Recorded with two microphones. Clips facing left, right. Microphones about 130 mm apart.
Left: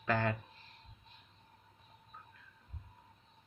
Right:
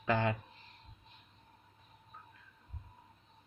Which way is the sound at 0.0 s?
15° right (ahead or behind).